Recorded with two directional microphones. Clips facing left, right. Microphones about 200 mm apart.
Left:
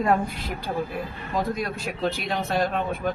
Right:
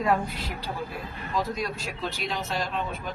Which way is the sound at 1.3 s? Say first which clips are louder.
Left 3 dB; 55° left (ahead or behind).